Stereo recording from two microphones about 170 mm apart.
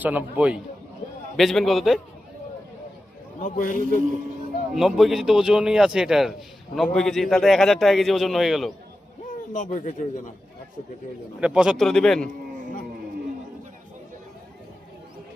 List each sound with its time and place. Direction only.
0.0 s a man's voice: 10° right (ahead or behind)
3.4 s a man's voice: 50° left (ahead or behind)
4.7 s a man's voice: centre (ahead or behind)
9.5 s a man's voice: 45° left (ahead or behind)
11.3 s a man's voice: 5° right (ahead or behind)